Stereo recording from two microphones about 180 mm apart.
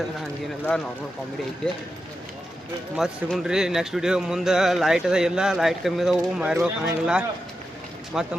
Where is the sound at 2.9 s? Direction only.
Centre (ahead or behind).